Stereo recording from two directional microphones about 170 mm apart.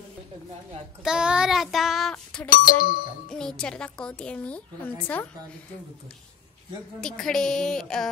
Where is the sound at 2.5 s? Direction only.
55° left (ahead or behind).